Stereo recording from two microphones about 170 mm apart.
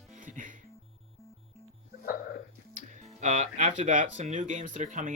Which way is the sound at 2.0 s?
60° left (ahead or behind).